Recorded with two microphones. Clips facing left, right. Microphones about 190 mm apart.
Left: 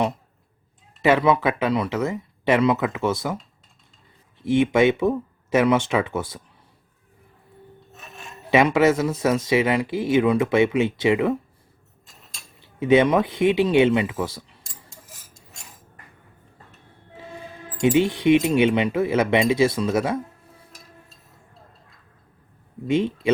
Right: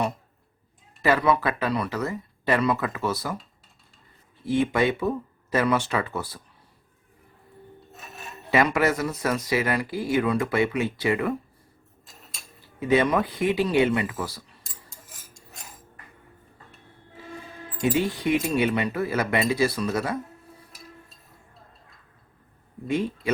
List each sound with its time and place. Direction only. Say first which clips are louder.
1.0 s speech: left 4 dB; 20° left (ahead or behind)
4.4 s speech: left 5 dB; 20° left (ahead or behind)
8.4 s speech: left 5 dB; 20° left (ahead or behind)
12.6 s speech: left 5 dB; 20° left (ahead or behind)
14.6 s a sound: left 2 dB; centre (ahead or behind)
17.8 s speech: left 6 dB; 20° left (ahead or behind)
22.9 s speech: left 5 dB; 25° left (ahead or behind)